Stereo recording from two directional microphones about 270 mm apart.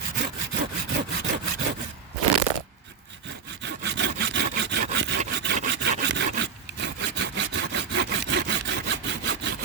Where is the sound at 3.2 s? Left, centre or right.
Right.